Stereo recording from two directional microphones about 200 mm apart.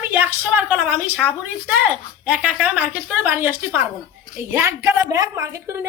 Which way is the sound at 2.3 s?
5° right (ahead or behind).